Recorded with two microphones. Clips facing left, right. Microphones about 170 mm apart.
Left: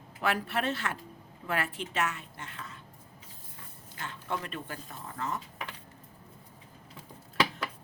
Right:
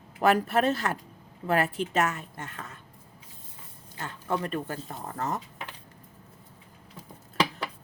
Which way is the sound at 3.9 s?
40° right (ahead or behind).